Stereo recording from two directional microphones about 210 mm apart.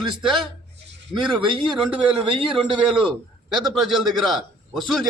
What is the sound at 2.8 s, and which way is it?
A man's voice, 5° right (ahead or behind).